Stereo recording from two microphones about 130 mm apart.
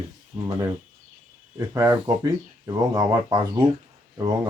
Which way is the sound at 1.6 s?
25° right (ahead or behind).